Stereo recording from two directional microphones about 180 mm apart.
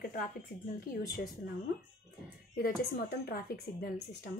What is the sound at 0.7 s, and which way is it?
Speech, 55° left (ahead or behind).